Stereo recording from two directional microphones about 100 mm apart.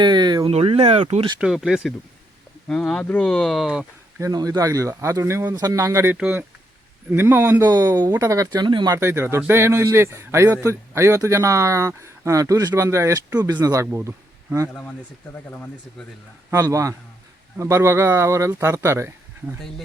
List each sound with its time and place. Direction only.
0.0 s a sound: 45° right (ahead or behind)
0.5 s speech: 85° right
1.4 s speech: 5° right (ahead or behind)
2.6 s speech: 10° left (ahead or behind)
3.2 s speech: 5° left (ahead or behind)
4.2 s speech: 40° right (ahead or behind)
5.5 s speech: 40° right (ahead or behind)
6.1 s a man's voice: 10° right (ahead or behind)
7.6 s speech: 40° right (ahead or behind)
8.6 s speech: 50° right (ahead or behind)
9.0 s a man's voice: 25° right (ahead or behind)
14.7 s speech: 15° left (ahead or behind)
16.5 s a man's voice: 30° right (ahead or behind)